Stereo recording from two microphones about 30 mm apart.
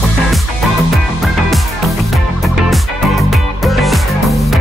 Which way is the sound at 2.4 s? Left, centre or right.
Centre.